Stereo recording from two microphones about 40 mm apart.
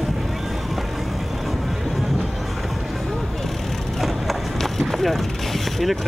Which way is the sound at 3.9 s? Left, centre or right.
Centre.